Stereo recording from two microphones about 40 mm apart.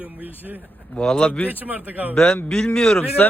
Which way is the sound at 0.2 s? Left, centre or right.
Right.